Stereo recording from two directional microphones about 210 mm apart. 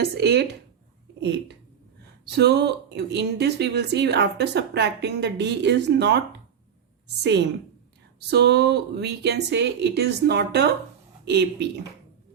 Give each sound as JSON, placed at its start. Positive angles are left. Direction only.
{"t": 0.0, "sound": "speech", "side_deg": -50}
{"t": 2.3, "sound": "speech", "side_deg": -50}